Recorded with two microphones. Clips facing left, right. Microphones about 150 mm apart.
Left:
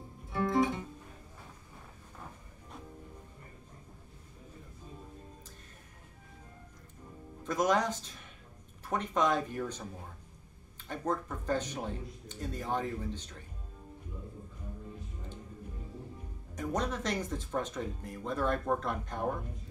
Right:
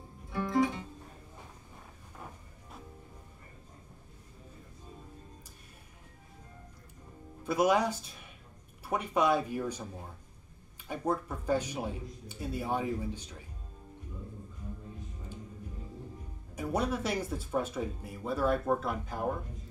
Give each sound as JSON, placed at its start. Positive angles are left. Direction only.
{"t": 0.3, "sound": "music", "side_deg": 20}
{"t": 7.4, "sound": "speech", "side_deg": -10}
{"t": 10.9, "sound": "speech", "side_deg": -10}
{"t": 16.5, "sound": "speech", "side_deg": -10}